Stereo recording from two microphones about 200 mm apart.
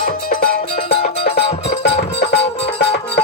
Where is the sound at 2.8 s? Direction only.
55° left (ahead or behind).